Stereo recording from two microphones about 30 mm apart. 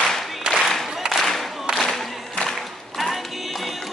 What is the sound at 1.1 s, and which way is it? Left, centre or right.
Music, centre.